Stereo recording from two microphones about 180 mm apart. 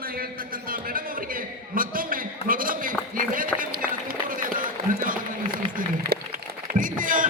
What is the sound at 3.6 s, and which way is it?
Run, 50° right (ahead or behind).